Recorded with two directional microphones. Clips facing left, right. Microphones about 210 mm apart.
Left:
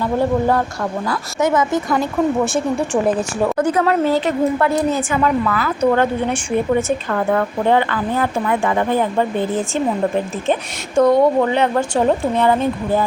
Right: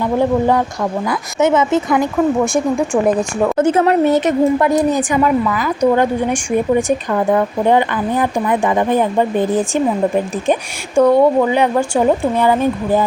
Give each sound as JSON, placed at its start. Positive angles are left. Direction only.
{"t": 0.0, "sound": "a woman's voice", "side_deg": -15}
{"t": 2.5, "sound": "a woman's voice", "side_deg": -10}
{"t": 3.6, "sound": "a woman's voice", "side_deg": -25}